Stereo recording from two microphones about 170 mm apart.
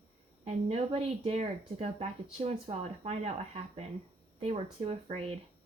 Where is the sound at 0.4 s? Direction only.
35° right (ahead or behind).